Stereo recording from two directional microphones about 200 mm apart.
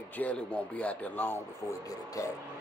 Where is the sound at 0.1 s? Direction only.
5° left (ahead or behind).